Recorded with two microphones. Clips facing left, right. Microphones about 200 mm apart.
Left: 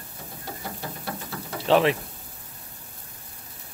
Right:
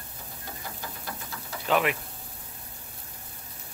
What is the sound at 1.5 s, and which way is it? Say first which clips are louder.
Mechanisms: left 6 dB; 30° left (ahead or behind).